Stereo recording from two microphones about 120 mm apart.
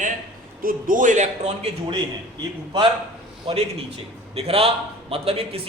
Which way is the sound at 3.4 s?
55° right (ahead or behind).